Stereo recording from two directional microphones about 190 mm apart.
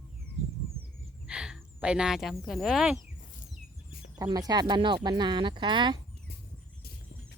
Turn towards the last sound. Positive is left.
turn(degrees=-25)  # may be behind; listen again after turning